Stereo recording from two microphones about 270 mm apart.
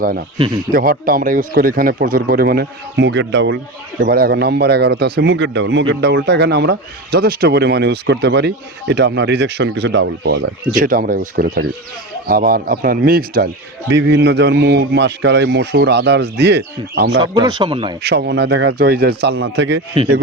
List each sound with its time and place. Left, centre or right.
0.3 s speech: centre
0.7 s a man's voice: right
17.3 s speech: centre
18.0 s a man's voice: right